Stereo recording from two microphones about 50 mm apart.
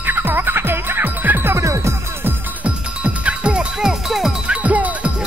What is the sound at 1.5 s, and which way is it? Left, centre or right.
Music, right.